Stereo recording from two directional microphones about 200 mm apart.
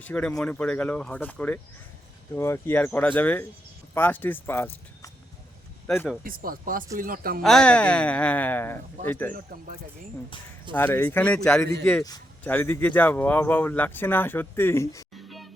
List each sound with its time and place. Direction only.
0.0 s speech: 5° left (ahead or behind)
6.2 s speech: 45° right (ahead or behind)
7.4 s speech: 5° left (ahead or behind)
10.8 s speech: 10° left (ahead or behind)
15.1 s music: centre (ahead or behind)